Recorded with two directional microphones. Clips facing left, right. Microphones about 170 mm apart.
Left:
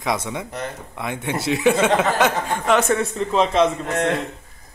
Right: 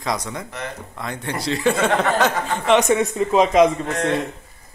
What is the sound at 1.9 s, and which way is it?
Speech, centre (ahead or behind).